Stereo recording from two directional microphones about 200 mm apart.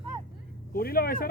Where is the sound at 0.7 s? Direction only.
50° left (ahead or behind).